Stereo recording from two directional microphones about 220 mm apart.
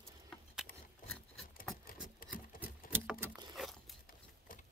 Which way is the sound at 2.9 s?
10° right (ahead or behind).